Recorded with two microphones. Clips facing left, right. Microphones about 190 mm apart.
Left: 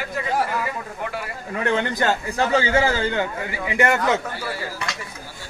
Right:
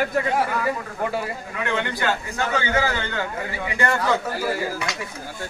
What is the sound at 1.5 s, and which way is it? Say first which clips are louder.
A man's voice: left 5 dB; 35° left (ahead or behind).